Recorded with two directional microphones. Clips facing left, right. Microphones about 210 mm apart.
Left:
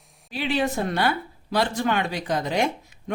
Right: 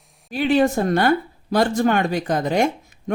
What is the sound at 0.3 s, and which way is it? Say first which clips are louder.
Speech: right 7 dB; 45° right (ahead or behind).